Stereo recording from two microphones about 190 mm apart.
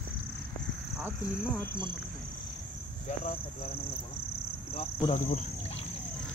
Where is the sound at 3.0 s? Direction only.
35° left (ahead or behind).